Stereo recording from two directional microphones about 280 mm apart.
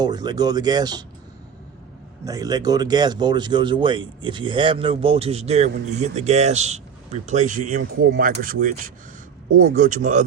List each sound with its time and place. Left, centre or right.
0.0 s speech: centre
2.2 s speech: centre